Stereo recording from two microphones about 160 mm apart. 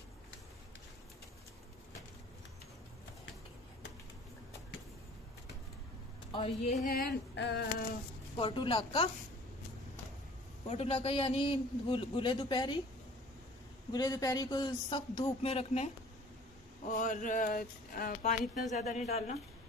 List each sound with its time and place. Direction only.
6.3 s speech: 35° left (ahead or behind)
6.7 s speech: 60° left (ahead or behind); by 7.6 s 85° left
8.4 s a man's voice: 35° left (ahead or behind)
10.7 s a man's voice: 40° left (ahead or behind)
13.9 s speech: 25° left (ahead or behind); by 15.9 s 40° left (ahead or behind)
16.8 s speech: 55° left (ahead or behind)